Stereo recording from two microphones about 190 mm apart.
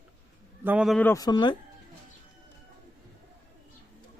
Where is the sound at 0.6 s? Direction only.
5° right (ahead or behind).